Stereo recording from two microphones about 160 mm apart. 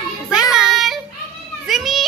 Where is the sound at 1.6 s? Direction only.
Centre (ahead or behind).